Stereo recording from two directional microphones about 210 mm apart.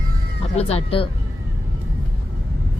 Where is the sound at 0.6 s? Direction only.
30° left (ahead or behind).